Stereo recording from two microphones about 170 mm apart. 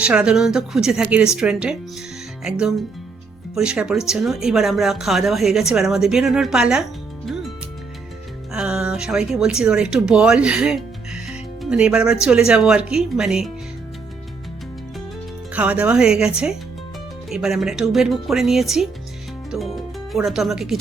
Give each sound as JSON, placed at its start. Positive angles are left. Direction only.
{"t": 0.0, "sound": "speech", "side_deg": -5}
{"t": 7.3, "sound": "music", "side_deg": 0}
{"t": 8.5, "sound": "speech", "side_deg": -5}
{"t": 15.5, "sound": "speech", "side_deg": -10}